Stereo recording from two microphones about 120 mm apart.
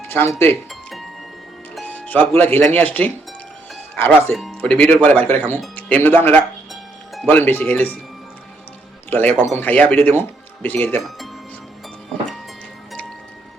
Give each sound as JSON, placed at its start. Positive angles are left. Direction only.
{"t": 0.1, "sound": "speech", "side_deg": 20}
{"t": 0.7, "sound": "music", "side_deg": 0}
{"t": 1.8, "sound": "a man's voice", "side_deg": 15}
{"t": 9.0, "sound": "a man's voice", "side_deg": 15}